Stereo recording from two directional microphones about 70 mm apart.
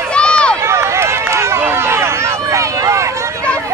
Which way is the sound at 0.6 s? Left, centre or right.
Right.